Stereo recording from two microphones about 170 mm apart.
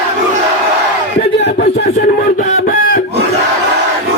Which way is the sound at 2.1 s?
65° left (ahead or behind).